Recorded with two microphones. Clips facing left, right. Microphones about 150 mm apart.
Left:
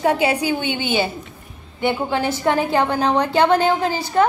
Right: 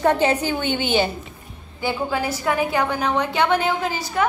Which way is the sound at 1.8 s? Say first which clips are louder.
Left 3 dB; 25° left (ahead or behind).